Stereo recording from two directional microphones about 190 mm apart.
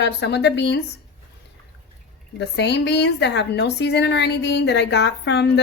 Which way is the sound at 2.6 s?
65° left (ahead or behind).